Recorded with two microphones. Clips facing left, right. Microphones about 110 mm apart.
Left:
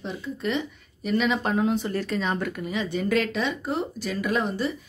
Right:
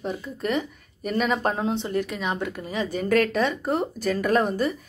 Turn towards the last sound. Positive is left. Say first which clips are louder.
# right 3 dB
turn(degrees=-50)  # may be behind; listen again after turning